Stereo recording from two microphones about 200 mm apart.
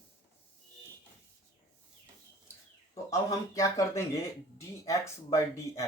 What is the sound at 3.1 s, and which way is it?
Speech, 15° left (ahead or behind).